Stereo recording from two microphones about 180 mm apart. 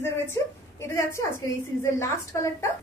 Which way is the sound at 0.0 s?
15° left (ahead or behind).